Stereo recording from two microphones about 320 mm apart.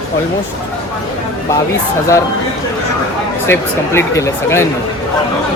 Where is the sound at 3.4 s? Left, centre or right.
Centre.